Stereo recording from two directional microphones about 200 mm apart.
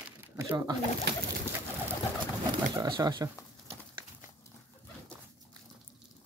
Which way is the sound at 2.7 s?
20° right (ahead or behind).